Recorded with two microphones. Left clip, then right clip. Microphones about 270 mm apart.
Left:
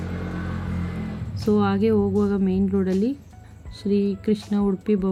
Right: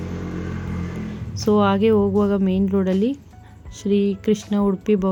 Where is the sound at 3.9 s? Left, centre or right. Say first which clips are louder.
Right 3 dB; right.